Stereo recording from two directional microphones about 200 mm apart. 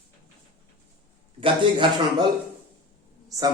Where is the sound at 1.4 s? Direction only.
25° right (ahead or behind).